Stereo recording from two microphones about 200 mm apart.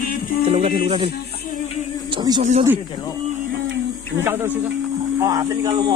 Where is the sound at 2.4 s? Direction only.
35° right (ahead or behind).